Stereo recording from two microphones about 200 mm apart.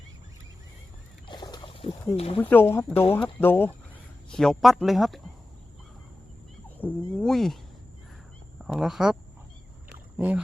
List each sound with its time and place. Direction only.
1.3 s a sound: 20° left (ahead or behind)
2.1 s speech: 30° left (ahead or behind)
2.4 s speech: 10° left (ahead or behind)
2.9 s speech: 30° left (ahead or behind)
3.3 s speech: 10° left (ahead or behind)
6.7 s speech: 5° left (ahead or behind)
8.6 s speech: centre (ahead or behind)
10.2 s speech: 10° right (ahead or behind)